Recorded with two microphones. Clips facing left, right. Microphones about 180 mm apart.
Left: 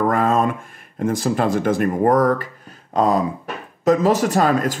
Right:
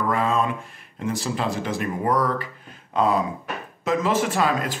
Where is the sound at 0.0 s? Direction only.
50° left (ahead or behind).